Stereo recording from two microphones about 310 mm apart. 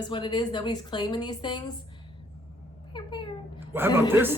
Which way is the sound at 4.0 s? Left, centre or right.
Centre.